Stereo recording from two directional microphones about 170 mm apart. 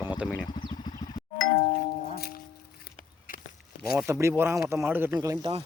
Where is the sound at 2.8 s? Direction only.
55° left (ahead or behind).